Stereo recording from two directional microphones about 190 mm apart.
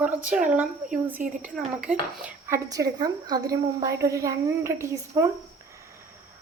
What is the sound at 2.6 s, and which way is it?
A woman's voice, 20° right (ahead or behind).